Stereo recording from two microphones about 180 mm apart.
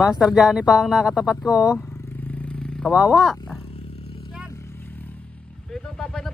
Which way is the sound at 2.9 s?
5° right (ahead or behind).